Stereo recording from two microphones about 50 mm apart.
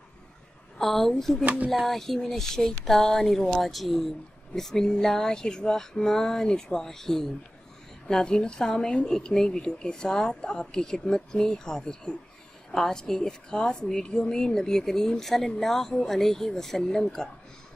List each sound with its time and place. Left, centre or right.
0.7 s a woman's voice: centre
1.4 s speech: right
1.9 s a woman's voice: centre